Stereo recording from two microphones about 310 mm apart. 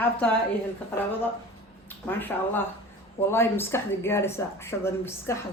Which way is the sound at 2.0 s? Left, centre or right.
Centre.